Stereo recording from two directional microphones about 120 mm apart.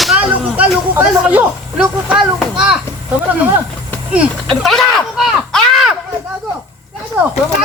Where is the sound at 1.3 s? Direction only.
10° right (ahead or behind).